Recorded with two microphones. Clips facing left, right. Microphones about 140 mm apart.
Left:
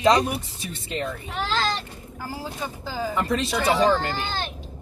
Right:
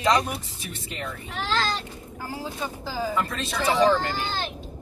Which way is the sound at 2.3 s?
Centre (ahead or behind).